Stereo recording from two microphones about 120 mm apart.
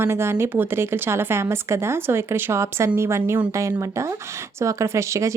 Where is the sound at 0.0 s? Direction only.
20° right (ahead or behind).